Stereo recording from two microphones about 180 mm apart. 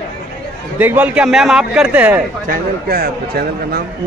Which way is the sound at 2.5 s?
55° right (ahead or behind).